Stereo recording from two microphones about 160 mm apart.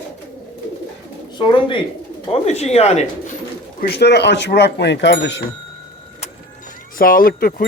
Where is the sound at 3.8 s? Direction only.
90° left.